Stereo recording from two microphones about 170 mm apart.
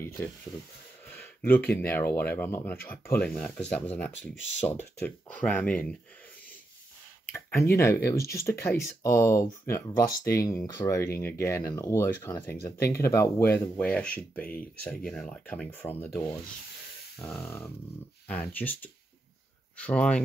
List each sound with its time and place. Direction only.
0.2 s speech: 15° left (ahead or behind)
7.3 s speech: 15° left (ahead or behind)